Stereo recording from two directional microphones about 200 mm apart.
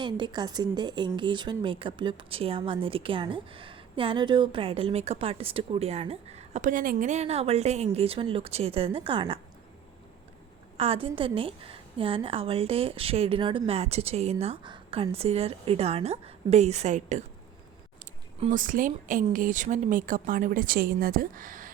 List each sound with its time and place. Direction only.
0.0 s speech: 20° right (ahead or behind)
10.8 s a woman's voice: 30° right (ahead or behind)